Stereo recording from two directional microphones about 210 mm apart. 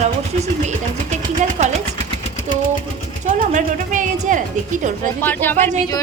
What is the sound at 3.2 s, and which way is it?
A woman's voice, 35° right (ahead or behind).